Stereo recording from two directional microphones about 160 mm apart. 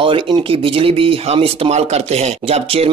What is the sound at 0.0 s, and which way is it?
Speech, 30° right (ahead or behind).